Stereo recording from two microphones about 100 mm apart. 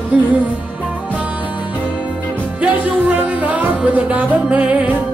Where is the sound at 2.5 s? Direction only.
15° right (ahead or behind).